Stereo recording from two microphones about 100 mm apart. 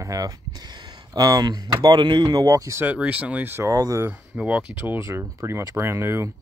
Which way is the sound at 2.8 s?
15° right (ahead or behind).